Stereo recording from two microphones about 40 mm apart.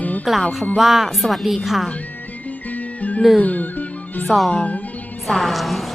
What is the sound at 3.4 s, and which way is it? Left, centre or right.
Speech, left.